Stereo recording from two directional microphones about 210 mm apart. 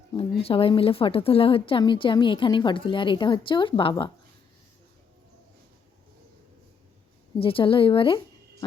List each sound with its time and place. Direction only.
0.1 s a woman's voice: 25° left (ahead or behind)
7.3 s a woman's voice: 25° left (ahead or behind)